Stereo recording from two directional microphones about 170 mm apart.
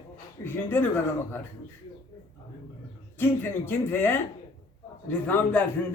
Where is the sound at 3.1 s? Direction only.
15° left (ahead or behind).